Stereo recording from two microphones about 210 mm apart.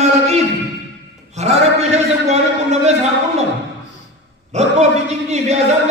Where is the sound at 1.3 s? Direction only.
30° right (ahead or behind).